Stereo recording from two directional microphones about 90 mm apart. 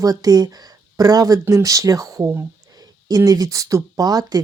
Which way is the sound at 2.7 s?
45° right (ahead or behind).